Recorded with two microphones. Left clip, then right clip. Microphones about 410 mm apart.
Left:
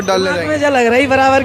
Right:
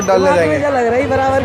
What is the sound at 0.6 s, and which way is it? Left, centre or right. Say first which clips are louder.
Speech: left 2 dB; left.